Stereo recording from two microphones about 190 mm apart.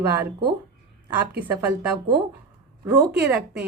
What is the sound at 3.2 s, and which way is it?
Speech, 10° right (ahead or behind).